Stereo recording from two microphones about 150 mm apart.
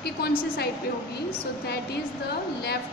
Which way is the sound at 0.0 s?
90° left.